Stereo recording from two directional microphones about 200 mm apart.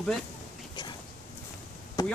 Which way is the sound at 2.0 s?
15° left (ahead or behind).